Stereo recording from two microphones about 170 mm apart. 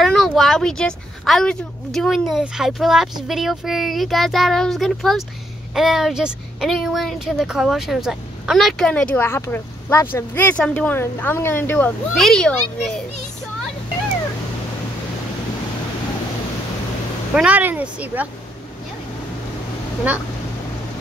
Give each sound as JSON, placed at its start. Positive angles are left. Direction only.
{"t": 0.0, "sound": "a woman's voice", "side_deg": 0}
{"t": 17.3, "sound": "speech", "side_deg": -5}